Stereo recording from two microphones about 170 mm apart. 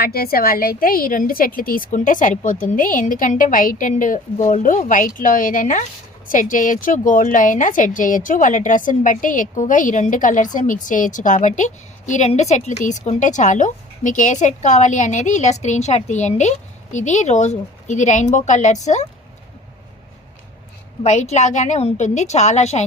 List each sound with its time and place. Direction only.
0.0 s a woman's voice: 65° left (ahead or behind); by 19.0 s 45° left (ahead or behind)
21.0 s a woman's voice: 40° left (ahead or behind)